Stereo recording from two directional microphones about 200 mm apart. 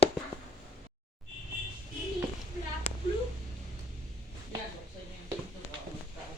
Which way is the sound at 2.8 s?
30° left (ahead or behind).